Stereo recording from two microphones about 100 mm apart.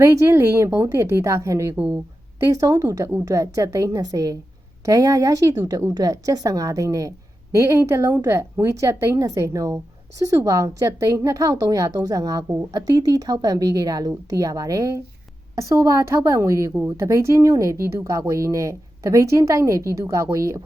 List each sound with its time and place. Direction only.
0.0 s a woman's voice: 30° right (ahead or behind)
1.7 s speech: 15° right (ahead or behind)
2.4 s a woman's voice: 35° right (ahead or behind)